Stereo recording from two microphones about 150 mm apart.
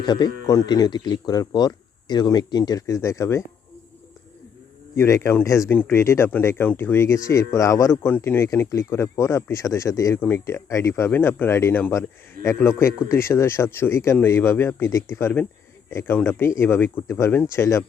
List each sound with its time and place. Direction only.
0.0 s speech: 30° left (ahead or behind)
4.9 s speech: 20° left (ahead or behind)